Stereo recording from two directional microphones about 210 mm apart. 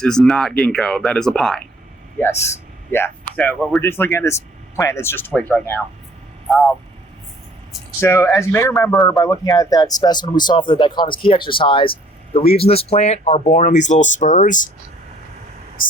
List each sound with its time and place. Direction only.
0.0 s speech: 5° left (ahead or behind)
8.0 s speech: 10° left (ahead or behind); by 14.7 s 40° left (ahead or behind)